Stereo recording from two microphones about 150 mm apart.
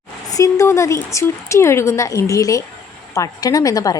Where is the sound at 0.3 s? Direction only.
20° left (ahead or behind).